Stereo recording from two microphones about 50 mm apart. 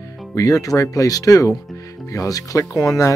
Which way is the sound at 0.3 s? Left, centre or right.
Left.